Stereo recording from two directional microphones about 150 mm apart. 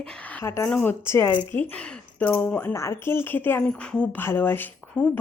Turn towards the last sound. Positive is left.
turn(degrees=10)  # may be behind; listen again after turning